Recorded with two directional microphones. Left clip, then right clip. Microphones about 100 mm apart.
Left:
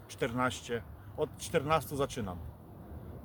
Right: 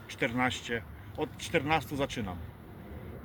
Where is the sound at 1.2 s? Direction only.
30° left (ahead or behind).